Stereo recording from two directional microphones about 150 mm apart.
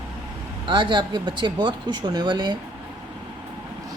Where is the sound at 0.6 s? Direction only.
30° right (ahead or behind).